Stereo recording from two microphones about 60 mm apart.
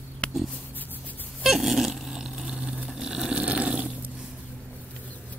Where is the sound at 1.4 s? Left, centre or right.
Centre.